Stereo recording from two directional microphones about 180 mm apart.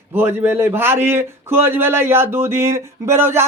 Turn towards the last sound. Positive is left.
turn(degrees=-15)  # may be behind; listen again after turning